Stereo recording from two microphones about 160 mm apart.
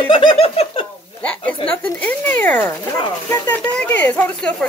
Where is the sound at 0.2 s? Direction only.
35° left (ahead or behind).